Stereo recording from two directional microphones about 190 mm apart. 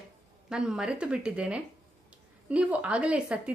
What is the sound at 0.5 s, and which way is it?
A woman's voice, 5° right (ahead or behind).